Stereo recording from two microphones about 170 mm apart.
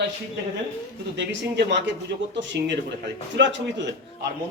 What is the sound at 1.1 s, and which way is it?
Speech, 90° right.